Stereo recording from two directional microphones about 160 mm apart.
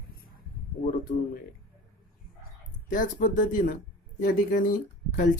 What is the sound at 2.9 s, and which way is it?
Speech, 55° left (ahead or behind).